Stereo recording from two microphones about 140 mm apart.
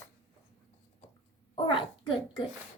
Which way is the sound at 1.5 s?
40° left (ahead or behind).